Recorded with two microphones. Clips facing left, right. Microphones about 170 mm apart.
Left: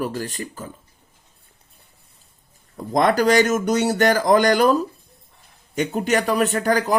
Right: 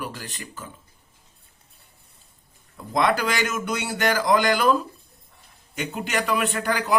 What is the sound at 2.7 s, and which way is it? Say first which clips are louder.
A man's voice: left 4 dB; 45° left (ahead or behind).